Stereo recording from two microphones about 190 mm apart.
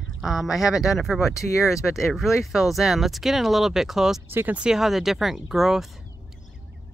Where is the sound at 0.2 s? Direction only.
Centre (ahead or behind).